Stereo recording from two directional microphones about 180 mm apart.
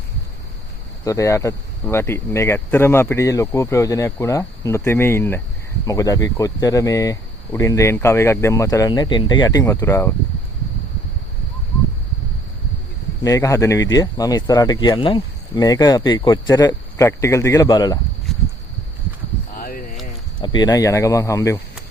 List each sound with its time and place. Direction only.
1.0 s speech: 15° left (ahead or behind)
13.2 s speech: 20° left (ahead or behind)
19.5 s a sound: 55° left (ahead or behind)
20.4 s speech: 25° left (ahead or behind)